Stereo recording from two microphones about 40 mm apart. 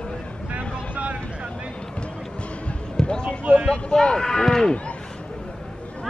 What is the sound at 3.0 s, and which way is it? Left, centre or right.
Basketball bounce, centre.